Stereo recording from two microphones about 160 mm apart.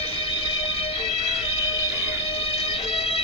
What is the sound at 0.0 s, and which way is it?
Music, 35° left (ahead or behind).